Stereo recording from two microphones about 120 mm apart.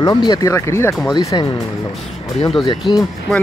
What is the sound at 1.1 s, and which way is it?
Speech, 35° left (ahead or behind).